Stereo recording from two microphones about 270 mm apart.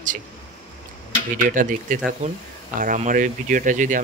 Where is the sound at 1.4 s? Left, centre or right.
Right.